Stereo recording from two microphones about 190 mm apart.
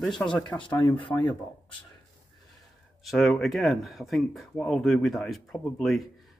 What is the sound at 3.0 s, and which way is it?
Speech, centre (ahead or behind).